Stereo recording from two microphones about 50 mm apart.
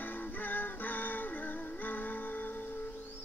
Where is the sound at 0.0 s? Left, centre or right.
Left.